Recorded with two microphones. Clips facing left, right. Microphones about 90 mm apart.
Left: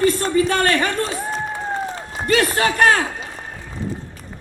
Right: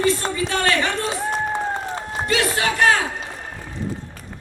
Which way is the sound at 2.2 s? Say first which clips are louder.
Left 4 dB; 45° left (ahead or behind).